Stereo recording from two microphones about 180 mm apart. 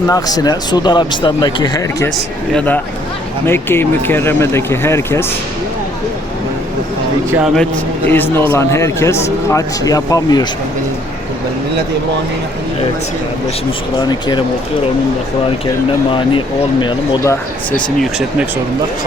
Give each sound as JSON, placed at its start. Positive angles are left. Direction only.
{"t": 0.1, "sound": "speech", "side_deg": 20}
{"t": 2.1, "sound": "a man's voice", "side_deg": 5}
{"t": 7.3, "sound": "speech", "side_deg": -10}
{"t": 7.5, "sound": "a man's voice", "side_deg": 5}
{"t": 14.0, "sound": "speech", "side_deg": 25}